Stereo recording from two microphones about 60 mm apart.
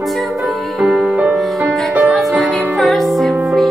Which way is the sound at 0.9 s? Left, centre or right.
Right.